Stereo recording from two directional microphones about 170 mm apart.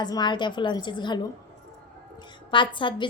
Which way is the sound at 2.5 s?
30° left (ahead or behind).